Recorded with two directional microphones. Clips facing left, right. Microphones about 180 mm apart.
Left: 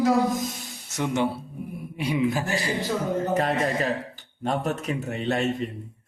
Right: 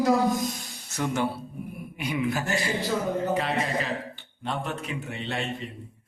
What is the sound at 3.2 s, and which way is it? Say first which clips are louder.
A man's voice: left 3 dB; 45° left (ahead or behind).